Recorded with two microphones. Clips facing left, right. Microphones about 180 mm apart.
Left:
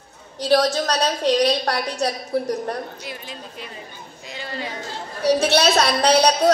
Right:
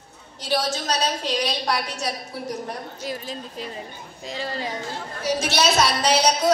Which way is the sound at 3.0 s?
40° right (ahead or behind).